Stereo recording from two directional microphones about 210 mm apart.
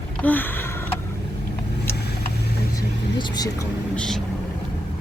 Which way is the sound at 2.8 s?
15° left (ahead or behind).